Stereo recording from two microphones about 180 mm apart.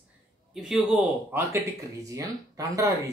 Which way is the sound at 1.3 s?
15° right (ahead or behind).